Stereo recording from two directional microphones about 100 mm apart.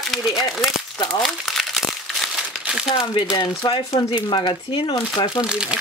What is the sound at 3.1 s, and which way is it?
Speech, 50° left (ahead or behind).